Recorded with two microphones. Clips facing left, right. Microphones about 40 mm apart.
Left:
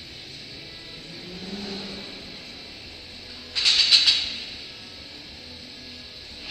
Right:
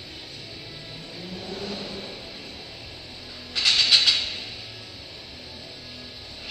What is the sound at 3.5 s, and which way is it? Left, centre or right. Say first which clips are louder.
Mechanisms: even; centre.